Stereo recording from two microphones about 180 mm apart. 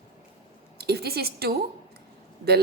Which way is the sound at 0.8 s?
60° right (ahead or behind).